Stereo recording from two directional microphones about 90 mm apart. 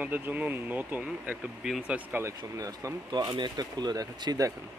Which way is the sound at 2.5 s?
40° right (ahead or behind).